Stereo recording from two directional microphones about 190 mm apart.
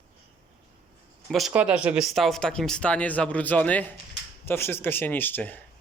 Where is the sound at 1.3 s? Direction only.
Centre (ahead or behind).